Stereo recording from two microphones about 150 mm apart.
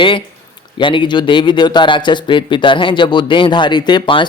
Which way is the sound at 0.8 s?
35° left (ahead or behind).